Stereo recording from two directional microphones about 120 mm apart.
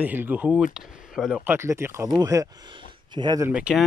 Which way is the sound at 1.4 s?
20° right (ahead or behind).